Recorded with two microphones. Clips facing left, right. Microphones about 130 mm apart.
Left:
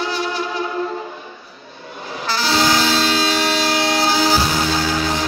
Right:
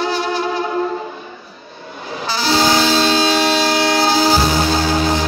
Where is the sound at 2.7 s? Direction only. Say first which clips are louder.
Right 3 dB; 25° right (ahead or behind).